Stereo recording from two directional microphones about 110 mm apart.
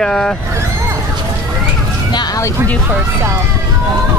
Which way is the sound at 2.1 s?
40° left (ahead or behind).